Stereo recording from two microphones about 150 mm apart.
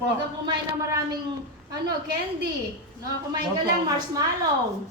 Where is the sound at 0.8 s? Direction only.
20° right (ahead or behind).